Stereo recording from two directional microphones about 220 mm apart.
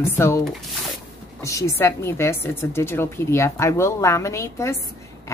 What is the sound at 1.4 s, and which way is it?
A woman's voice, 15° left (ahead or behind).